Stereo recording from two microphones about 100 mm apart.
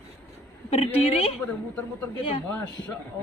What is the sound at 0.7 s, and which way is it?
Speech, 80° left.